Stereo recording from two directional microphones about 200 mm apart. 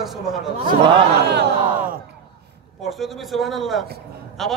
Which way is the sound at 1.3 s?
55° right (ahead or behind).